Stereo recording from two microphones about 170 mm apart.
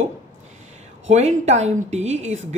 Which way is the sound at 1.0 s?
40° right (ahead or behind).